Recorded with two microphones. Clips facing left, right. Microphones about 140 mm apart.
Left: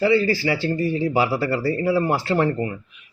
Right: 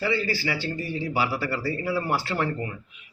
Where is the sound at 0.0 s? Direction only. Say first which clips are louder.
Left 8 dB; 30° left (ahead or behind).